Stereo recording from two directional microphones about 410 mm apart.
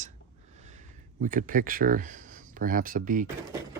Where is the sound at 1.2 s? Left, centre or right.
Centre.